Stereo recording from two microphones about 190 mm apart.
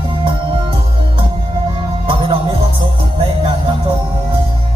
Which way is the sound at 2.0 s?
25° right (ahead or behind).